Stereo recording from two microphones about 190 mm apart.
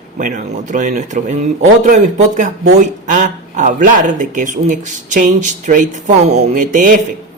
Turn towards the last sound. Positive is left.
turn(degrees=-45)  # may be behind; listen again after turning